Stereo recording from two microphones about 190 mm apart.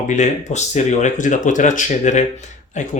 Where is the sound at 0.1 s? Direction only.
40° left (ahead or behind).